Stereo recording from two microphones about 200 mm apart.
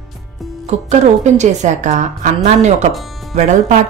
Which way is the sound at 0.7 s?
35° right (ahead or behind).